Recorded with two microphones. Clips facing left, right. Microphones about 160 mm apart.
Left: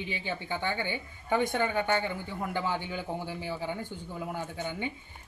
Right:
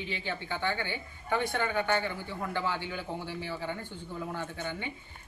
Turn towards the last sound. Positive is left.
turn(degrees=15)  # may be behind; listen again after turning